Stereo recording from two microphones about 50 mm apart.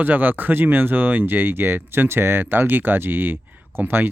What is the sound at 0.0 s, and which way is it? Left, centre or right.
Speech, right.